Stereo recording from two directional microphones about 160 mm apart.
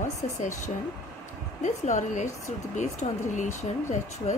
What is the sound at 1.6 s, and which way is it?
Speech, 50° left (ahead or behind).